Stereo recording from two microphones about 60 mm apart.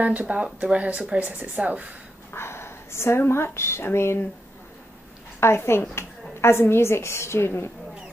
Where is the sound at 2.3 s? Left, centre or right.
Left.